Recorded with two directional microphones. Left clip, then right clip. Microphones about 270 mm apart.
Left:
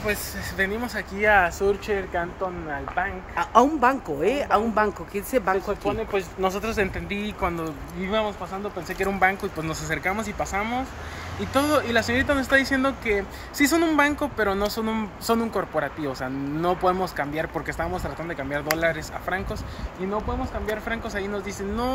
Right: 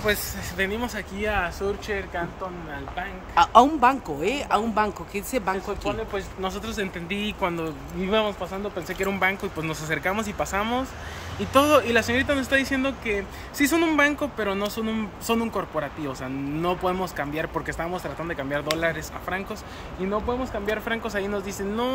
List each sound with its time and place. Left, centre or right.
0.0 s speech: centre
1.6 s speech: left
3.0 s speech: centre
5.9 s speech: left
8.1 s speech: centre